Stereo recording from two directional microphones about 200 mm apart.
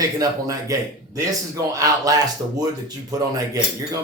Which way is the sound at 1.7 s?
20° right (ahead or behind).